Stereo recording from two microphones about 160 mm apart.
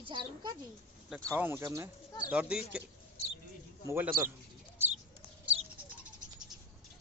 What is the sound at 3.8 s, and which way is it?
Speech, 15° right (ahead or behind).